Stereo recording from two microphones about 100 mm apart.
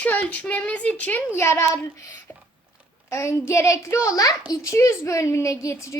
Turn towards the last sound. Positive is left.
turn(degrees=30)  # may be behind; listen again after turning